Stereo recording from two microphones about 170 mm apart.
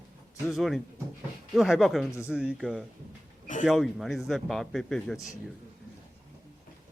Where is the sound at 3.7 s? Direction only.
Centre (ahead or behind).